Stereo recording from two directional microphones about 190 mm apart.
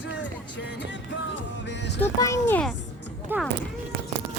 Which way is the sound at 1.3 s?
65° left (ahead or behind).